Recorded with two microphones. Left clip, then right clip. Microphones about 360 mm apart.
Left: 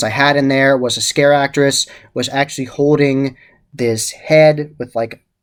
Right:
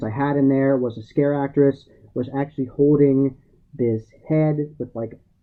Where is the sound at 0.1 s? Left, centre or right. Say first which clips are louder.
Left 5 dB; centre.